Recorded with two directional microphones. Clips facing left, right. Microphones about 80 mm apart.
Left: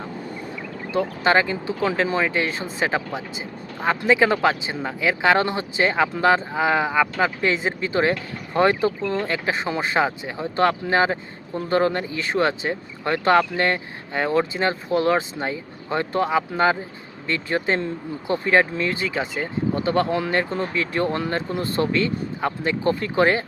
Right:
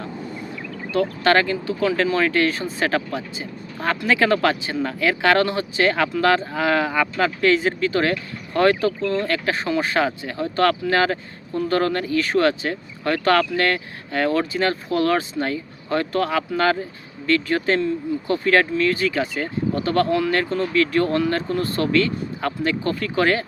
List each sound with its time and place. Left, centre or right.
0.9 s speech: centre
2.1 s speech: centre